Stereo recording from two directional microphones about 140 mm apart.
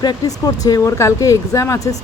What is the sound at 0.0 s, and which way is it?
Speech, 30° left (ahead or behind).